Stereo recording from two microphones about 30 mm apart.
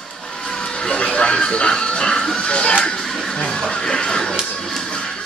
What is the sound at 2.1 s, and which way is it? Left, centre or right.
Music, centre.